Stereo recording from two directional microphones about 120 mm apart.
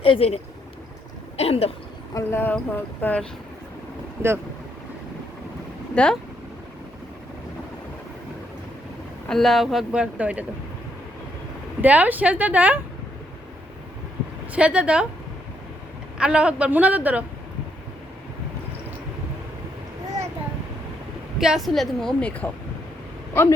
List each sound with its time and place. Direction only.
0.0 s speech: 50° left (ahead or behind)
1.4 s speech: 55° left (ahead or behind)
2.1 s speech: 20° left (ahead or behind)
5.9 s speech: 10° left (ahead or behind)
9.2 s speech: 5° left (ahead or behind)
11.8 s a woman's voice: 15° right (ahead or behind)
14.5 s a woman's voice: 10° right (ahead or behind)
16.1 s a woman's voice: 10° right (ahead or behind)
21.3 s speech: 5° right (ahead or behind); by 23.6 s 20° left (ahead or behind)